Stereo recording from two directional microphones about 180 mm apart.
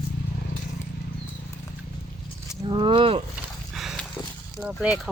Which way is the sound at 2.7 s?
25° right (ahead or behind).